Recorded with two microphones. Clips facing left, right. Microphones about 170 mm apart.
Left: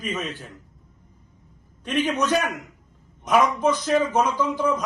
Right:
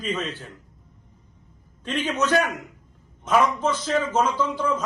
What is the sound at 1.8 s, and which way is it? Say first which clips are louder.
A man's voice: left 2 dB; 10° left (ahead or behind).